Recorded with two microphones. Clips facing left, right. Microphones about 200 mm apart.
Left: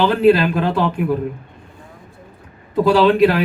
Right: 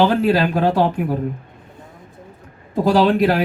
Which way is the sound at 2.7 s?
40° right (ahead or behind).